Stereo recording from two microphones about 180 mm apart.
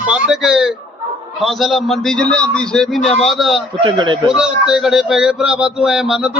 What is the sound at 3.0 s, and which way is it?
Speech, 35° left (ahead or behind).